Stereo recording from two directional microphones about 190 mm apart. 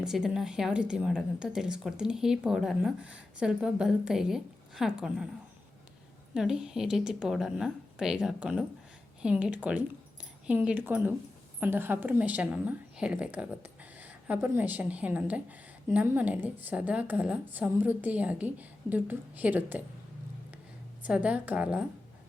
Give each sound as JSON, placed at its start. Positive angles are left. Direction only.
{"t": 0.0, "sound": "a woman's voice", "side_deg": 0}
{"t": 6.3, "sound": "a woman's voice", "side_deg": -5}
{"t": 21.0, "sound": "a woman's voice", "side_deg": -5}